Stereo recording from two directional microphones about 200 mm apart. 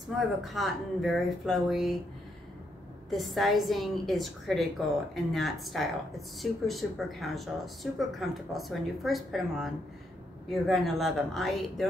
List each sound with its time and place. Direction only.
0.4 s speech: centre (ahead or behind)
3.1 s speech: centre (ahead or behind)